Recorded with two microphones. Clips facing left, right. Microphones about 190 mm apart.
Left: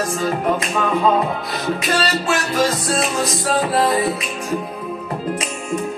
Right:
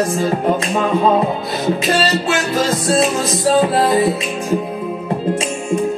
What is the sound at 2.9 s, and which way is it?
Music, 25° right (ahead or behind).